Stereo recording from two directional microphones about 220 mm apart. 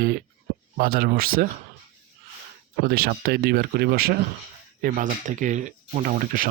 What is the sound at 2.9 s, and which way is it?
Speech, 45° right (ahead or behind).